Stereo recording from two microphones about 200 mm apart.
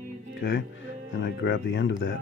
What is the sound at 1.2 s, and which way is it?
Speech, 60° left (ahead or behind).